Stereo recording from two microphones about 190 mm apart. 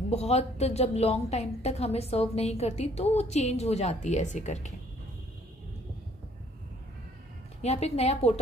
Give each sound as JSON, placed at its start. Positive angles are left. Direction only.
{"t": 0.1, "sound": "a woman's voice", "side_deg": 35}
{"t": 7.6, "sound": "a woman's voice", "side_deg": 35}